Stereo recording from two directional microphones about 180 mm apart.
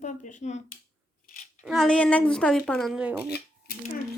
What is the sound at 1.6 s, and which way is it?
Speech, centre (ahead or behind).